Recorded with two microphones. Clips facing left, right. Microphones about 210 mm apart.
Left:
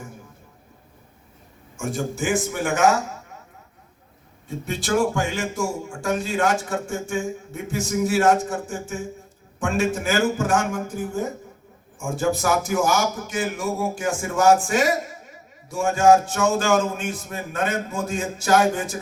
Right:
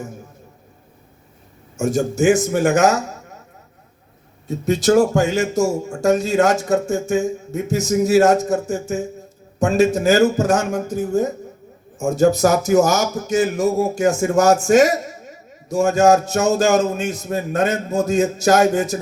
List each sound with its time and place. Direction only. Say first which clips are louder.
1.7 s speech: right 8 dB; 45° right (ahead or behind)
4.4 s a man's voice: right 10 dB; 40° right (ahead or behind)